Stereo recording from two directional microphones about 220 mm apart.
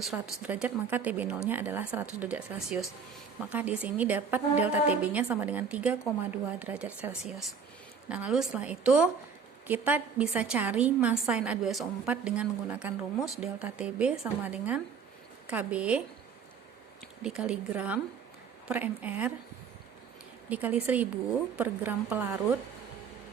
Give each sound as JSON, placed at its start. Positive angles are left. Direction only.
{"t": 0.0, "sound": "a woman's voice", "side_deg": 0}
{"t": 17.2, "sound": "a woman's voice", "side_deg": -5}
{"t": 20.5, "sound": "a woman's voice", "side_deg": -5}